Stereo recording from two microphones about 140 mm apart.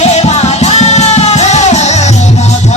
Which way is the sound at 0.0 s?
50° left (ahead or behind).